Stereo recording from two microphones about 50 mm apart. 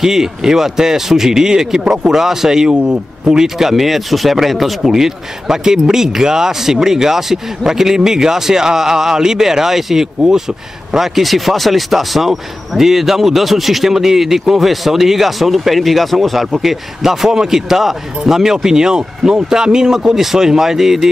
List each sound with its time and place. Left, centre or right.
0.0 s speech: centre
2.7 s speech: right
3.3 s speech: centre